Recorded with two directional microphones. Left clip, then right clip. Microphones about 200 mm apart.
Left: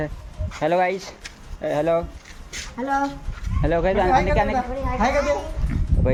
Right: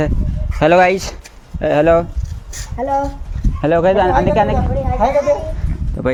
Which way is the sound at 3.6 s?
35° right (ahead or behind).